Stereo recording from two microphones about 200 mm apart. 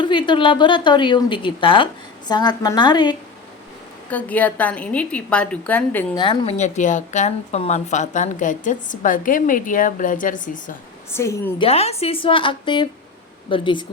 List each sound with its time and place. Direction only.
0.0 s a woman's voice: 25° left (ahead or behind)
4.1 s a woman's voice: 10° left (ahead or behind)
6.1 s a woman's voice: 25° left (ahead or behind); by 10.8 s 40° left (ahead or behind)
11.1 s a woman's voice: 15° left (ahead or behind)
11.6 s a woman's voice: 30° left (ahead or behind)